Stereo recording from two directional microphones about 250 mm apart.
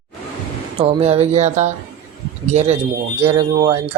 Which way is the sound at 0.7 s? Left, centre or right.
Right.